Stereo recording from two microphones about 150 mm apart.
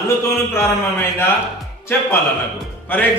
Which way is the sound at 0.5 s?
15° left (ahead or behind).